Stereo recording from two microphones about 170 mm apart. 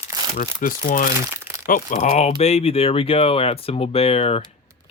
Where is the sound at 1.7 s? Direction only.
45° left (ahead or behind).